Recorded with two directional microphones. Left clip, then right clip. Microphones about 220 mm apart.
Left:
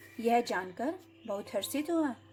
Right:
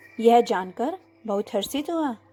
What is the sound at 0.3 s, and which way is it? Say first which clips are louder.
Speech: right 11 dB; 30° right (ahead or behind).